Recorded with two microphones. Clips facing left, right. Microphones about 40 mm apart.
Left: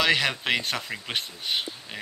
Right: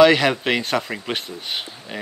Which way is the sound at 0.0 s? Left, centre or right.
Centre.